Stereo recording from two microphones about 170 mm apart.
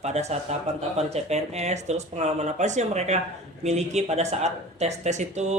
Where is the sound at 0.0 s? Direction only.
40° right (ahead or behind).